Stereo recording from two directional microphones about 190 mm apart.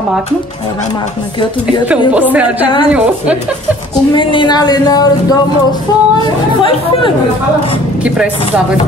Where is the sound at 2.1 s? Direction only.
5° right (ahead or behind).